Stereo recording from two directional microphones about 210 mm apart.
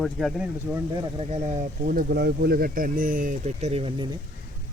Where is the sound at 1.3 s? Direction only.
30° right (ahead or behind).